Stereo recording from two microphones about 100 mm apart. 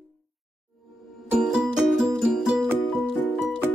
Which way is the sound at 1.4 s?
5° right (ahead or behind).